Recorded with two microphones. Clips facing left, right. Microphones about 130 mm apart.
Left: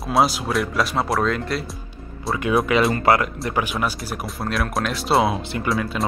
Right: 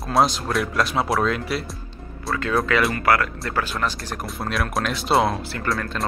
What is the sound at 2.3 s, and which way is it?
Speech, 15° left (ahead or behind).